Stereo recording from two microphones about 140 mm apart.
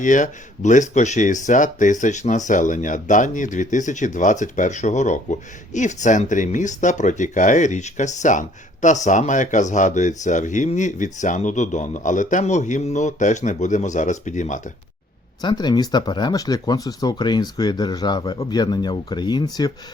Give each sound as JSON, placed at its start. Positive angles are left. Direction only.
{"t": 0.0, "sound": "speech", "side_deg": 65}
{"t": 15.4, "sound": "speech", "side_deg": 30}